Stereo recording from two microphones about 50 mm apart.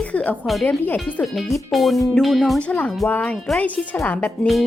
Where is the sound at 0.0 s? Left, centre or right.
Left.